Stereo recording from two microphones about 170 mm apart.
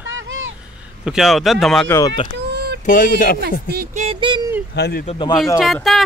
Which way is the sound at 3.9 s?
40° right (ahead or behind).